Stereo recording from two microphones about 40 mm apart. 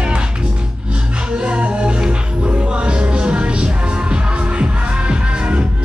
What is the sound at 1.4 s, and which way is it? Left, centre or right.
Music, right.